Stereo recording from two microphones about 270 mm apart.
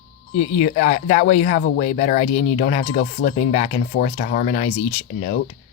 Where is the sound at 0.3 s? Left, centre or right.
Left.